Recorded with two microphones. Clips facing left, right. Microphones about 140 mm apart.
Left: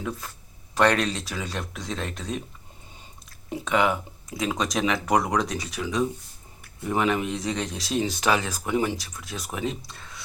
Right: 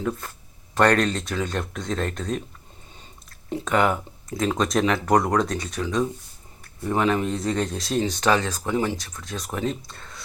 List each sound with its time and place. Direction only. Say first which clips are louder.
0.7 s speech: right 2 dB; centre (ahead or behind)
3.5 s speech: right 2 dB; centre (ahead or behind)
7.4 s speech: right 4 dB; centre (ahead or behind)
7.9 s speech: even; 45° right (ahead or behind)
8.1 s speech: right 3 dB; 10° left (ahead or behind)